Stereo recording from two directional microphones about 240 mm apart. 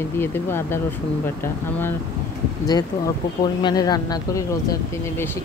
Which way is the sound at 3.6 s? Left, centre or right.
Centre.